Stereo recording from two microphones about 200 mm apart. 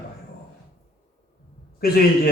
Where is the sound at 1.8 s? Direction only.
50° left (ahead or behind).